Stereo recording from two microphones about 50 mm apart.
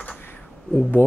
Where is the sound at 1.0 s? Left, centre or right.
Left.